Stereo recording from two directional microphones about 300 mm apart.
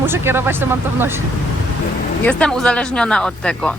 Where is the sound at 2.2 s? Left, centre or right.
Centre.